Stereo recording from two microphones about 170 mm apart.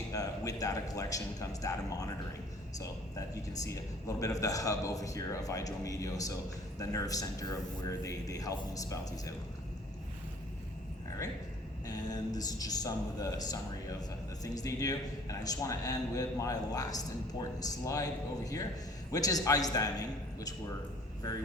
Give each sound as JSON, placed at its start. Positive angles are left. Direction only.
{"t": 0.1, "sound": "a man's voice", "side_deg": 20}
{"t": 4.2, "sound": "speech", "side_deg": 20}
{"t": 11.9, "sound": "speech", "side_deg": 25}